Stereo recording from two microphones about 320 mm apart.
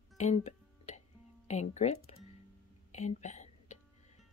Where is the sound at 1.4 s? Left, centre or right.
Left.